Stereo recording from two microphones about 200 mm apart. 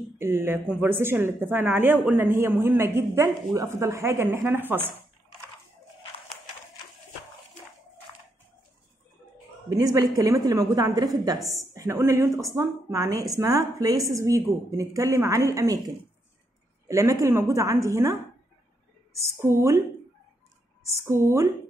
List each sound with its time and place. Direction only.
0.2 s speech: 10° right (ahead or behind)
9.7 s speech: 20° right (ahead or behind)
16.8 s speech: 15° right (ahead or behind)
19.1 s speech: 15° right (ahead or behind)
20.8 s speech: 15° right (ahead or behind)